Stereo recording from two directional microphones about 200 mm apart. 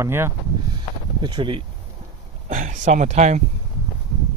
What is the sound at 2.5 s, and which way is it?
Speech, 40° right (ahead or behind).